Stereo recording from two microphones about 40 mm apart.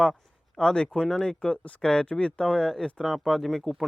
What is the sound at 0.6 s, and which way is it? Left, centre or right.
Speech, left.